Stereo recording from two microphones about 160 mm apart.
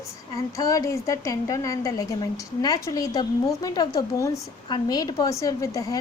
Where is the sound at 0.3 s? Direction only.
20° left (ahead or behind).